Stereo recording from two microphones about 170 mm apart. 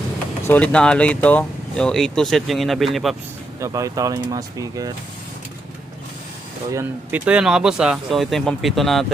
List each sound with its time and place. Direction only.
0.4 s speech: 10° left (ahead or behind)
3.6 s speech: 20° right (ahead or behind)
6.7 s speech: 10° right (ahead or behind)